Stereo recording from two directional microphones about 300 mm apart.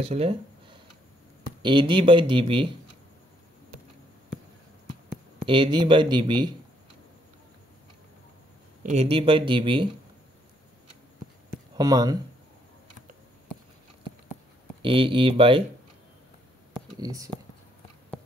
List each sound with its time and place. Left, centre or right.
0.0 s speech: centre
5.4 s speech: centre
8.8 s speech: right
11.7 s speech: centre
14.8 s speech: centre
17.0 s speech: centre